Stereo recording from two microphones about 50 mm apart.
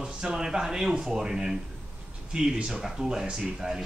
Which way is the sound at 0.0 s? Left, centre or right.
Centre.